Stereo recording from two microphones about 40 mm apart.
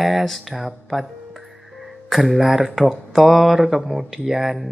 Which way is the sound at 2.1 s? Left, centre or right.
Centre.